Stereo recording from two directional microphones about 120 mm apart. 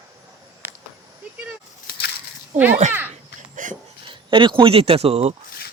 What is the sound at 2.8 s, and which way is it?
Speech, 80° right.